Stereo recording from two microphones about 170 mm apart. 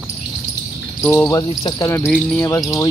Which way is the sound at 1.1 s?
15° left (ahead or behind).